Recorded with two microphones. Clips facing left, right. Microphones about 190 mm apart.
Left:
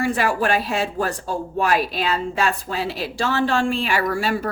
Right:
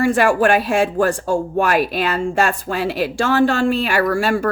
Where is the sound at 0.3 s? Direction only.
50° right (ahead or behind).